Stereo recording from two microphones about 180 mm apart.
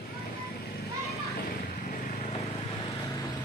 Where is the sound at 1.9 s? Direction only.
35° left (ahead or behind).